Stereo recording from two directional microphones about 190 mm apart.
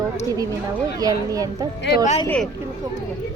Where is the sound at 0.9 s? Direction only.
20° right (ahead or behind).